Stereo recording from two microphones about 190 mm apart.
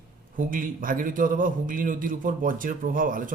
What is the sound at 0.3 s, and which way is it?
A man's voice, 45° right (ahead or behind).